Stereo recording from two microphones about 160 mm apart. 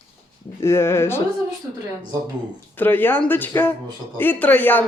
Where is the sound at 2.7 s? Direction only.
10° left (ahead or behind).